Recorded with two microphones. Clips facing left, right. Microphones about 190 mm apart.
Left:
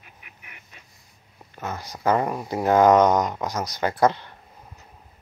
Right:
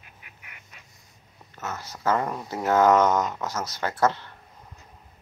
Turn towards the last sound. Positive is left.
turn(degrees=15)  # may be behind; listen again after turning